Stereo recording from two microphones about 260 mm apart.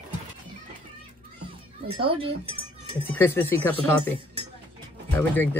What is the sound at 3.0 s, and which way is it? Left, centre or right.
Speech, centre.